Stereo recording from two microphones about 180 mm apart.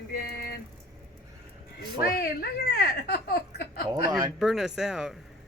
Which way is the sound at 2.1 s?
60° left (ahead or behind).